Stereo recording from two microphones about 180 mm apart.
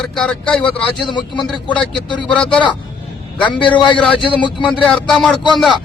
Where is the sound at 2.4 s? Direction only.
5° left (ahead or behind).